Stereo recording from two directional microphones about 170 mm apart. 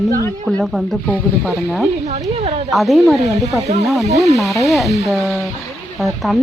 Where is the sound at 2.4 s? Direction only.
40° right (ahead or behind).